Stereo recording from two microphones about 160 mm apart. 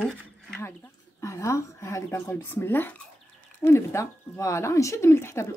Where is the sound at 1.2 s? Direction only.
20° left (ahead or behind).